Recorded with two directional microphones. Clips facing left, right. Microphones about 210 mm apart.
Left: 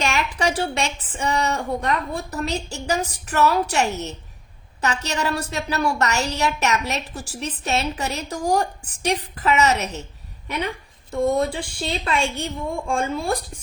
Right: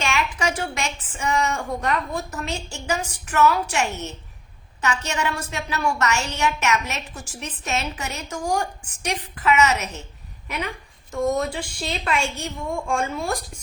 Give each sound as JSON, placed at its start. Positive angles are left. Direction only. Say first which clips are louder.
{"t": 0.0, "sound": "a woman's voice", "louder": "left 2 dB", "side_deg": 40}
{"t": 11.1, "sound": "a woman's voice", "louder": "left 2 dB", "side_deg": 30}